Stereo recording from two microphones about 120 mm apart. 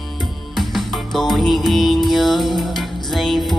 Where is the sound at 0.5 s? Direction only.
Centre (ahead or behind).